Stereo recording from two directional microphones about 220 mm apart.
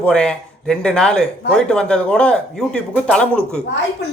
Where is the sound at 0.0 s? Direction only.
5° left (ahead or behind).